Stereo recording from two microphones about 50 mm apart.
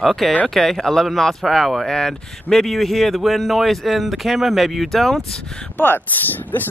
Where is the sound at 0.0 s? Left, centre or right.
Centre.